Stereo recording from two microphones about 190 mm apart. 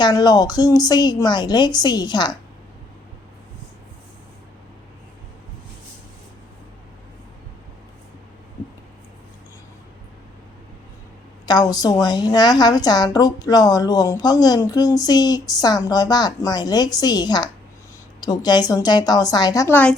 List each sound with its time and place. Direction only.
0.0 s a woman's voice: 20° left (ahead or behind)
11.4 s a woman's voice: 20° left (ahead or behind)